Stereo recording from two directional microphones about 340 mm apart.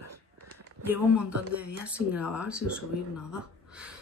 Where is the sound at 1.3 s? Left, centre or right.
Right.